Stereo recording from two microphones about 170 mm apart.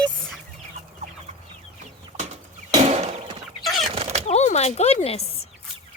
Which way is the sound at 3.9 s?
35° right (ahead or behind).